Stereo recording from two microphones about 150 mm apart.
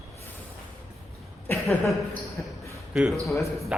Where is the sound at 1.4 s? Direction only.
15° left (ahead or behind).